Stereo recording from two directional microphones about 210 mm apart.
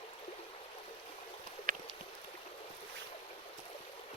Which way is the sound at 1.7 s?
40° right (ahead or behind).